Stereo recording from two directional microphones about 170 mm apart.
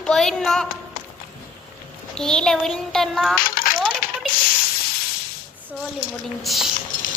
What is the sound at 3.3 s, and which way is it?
Coin, 55° left (ahead or behind).